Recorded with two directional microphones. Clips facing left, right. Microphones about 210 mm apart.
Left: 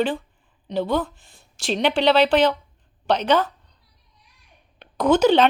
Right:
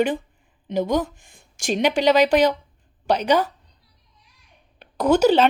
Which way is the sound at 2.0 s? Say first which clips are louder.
Even; 10° right (ahead or behind).